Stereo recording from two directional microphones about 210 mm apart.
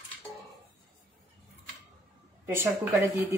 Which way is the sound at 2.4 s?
10° right (ahead or behind).